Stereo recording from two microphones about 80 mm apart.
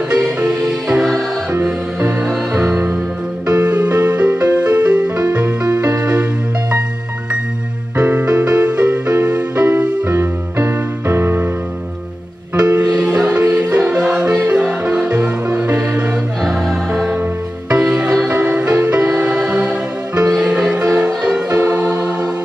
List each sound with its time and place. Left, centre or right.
0.1 s music: centre
1.5 s music: right
3.4 s music: centre
5.7 s music: right
8.0 s music: centre
10.1 s music: right
13.2 s music: centre